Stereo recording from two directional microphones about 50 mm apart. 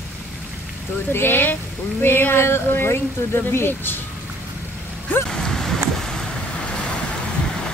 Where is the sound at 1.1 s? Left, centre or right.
Left.